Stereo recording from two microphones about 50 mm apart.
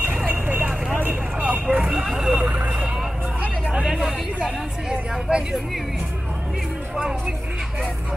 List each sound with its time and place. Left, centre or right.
0.3 s vehicle: right
1.4 s vehicle: right
1.8 s vehicle: centre
2.3 s vehicle: right
3.8 s vehicle: centre
5.3 s speech: centre
7.0 s speech: centre